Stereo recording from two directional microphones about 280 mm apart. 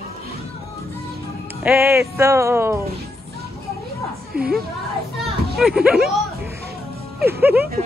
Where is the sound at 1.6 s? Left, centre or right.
Centre.